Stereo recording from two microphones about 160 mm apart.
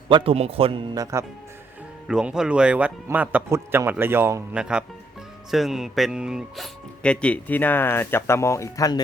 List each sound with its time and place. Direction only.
0.1 s speech: 35° right (ahead or behind)
2.0 s a man's voice: 5° right (ahead or behind)
4.5 s speech: 5° right (ahead or behind)
7.0 s speech: 5° left (ahead or behind)